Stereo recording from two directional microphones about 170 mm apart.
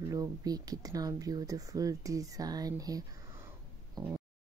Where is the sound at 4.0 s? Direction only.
25° right (ahead or behind).